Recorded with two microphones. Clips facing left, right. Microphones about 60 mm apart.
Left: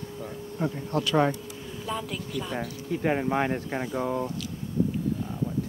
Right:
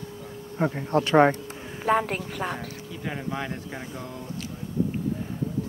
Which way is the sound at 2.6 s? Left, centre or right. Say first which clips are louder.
Left 6 dB; left.